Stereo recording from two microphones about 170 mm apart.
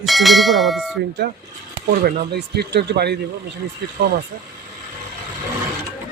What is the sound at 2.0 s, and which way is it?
Speech, 70° right (ahead or behind).